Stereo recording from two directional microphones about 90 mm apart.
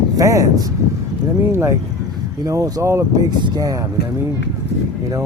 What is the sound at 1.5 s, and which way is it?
Speech, 30° right (ahead or behind).